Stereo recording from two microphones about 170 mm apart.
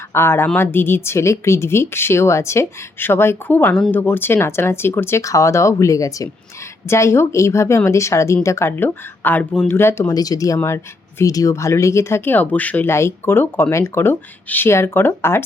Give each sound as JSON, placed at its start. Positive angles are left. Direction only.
{"t": 0.1, "sound": "speech", "side_deg": 15}